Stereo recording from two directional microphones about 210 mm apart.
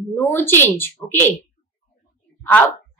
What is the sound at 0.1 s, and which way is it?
A child's voice, 10° left (ahead or behind).